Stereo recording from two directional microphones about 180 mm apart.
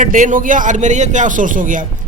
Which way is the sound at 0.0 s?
45° right (ahead or behind).